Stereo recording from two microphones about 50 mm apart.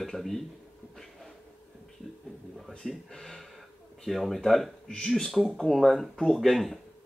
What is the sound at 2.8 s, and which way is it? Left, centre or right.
Speech, centre.